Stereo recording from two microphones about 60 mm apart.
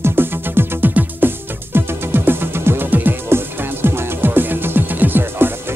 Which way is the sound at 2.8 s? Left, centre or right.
Right.